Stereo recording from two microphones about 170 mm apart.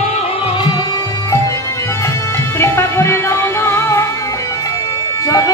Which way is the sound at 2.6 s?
15° left (ahead or behind).